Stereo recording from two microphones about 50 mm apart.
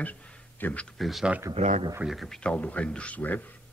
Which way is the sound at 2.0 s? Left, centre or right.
Right.